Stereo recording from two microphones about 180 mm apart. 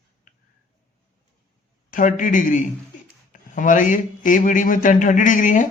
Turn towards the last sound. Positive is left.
turn(degrees=45)  # may be behind; listen again after turning